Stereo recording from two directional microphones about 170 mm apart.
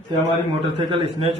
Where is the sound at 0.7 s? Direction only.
30° right (ahead or behind).